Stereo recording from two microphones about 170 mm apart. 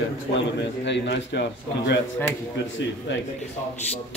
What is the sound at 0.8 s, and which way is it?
A man's voice, 90° left.